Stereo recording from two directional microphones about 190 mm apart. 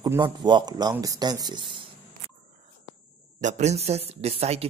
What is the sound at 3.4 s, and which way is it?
Speech, 40° right (ahead or behind).